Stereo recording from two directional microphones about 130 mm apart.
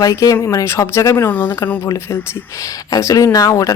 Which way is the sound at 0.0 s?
25° left (ahead or behind).